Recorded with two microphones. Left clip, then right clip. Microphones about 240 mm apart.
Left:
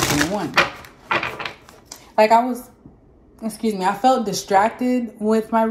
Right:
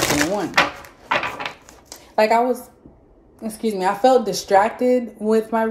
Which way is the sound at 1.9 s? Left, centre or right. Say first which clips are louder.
Left 2 dB; centre.